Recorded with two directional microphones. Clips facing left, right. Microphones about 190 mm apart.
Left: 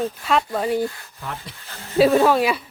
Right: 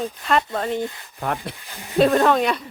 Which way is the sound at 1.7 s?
15° right (ahead or behind).